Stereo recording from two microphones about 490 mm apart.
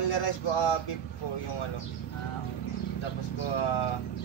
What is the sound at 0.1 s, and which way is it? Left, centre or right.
Speech, left.